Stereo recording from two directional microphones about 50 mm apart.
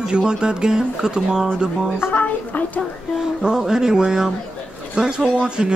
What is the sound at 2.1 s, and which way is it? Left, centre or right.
Speech, left.